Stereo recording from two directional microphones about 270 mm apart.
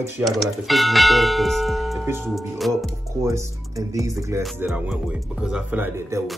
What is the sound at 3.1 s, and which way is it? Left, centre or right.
Speech, centre.